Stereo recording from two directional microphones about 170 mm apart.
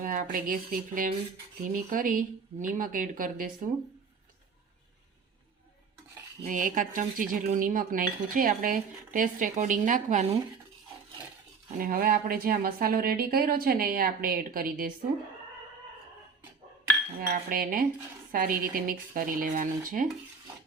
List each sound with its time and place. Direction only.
0.0 s speech: 55° right (ahead or behind)
6.4 s speech: 50° right (ahead or behind)
11.8 s speech: 55° right (ahead or behind)
17.2 s speech: 60° right (ahead or behind)